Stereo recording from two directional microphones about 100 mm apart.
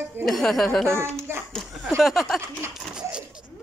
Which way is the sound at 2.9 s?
10° right (ahead or behind).